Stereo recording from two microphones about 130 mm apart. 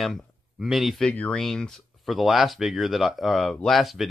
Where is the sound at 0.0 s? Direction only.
Centre (ahead or behind).